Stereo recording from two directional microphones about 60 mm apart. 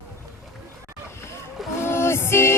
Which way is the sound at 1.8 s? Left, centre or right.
Left.